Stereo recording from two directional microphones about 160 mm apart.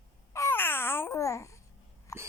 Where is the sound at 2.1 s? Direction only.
20° left (ahead or behind).